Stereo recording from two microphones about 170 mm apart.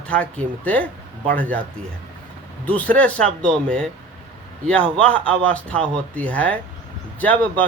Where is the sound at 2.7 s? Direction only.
10° left (ahead or behind).